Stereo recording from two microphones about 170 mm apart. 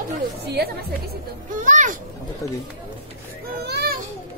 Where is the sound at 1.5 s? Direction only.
50° right (ahead or behind).